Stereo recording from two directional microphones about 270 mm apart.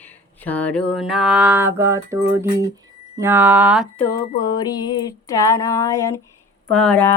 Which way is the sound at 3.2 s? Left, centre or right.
Centre.